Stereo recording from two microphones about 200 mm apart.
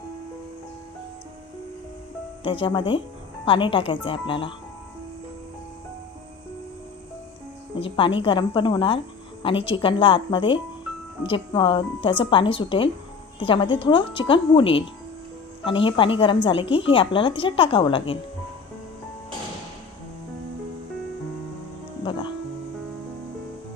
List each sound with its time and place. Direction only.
2.4 s a woman's voice: 25° left (ahead or behind)
7.8 s a woman's voice: 25° left (ahead or behind)